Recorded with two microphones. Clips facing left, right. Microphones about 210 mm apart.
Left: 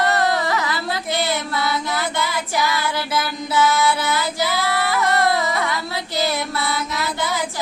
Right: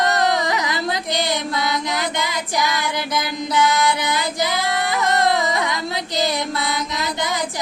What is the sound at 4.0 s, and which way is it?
Female singing, 20° right (ahead or behind).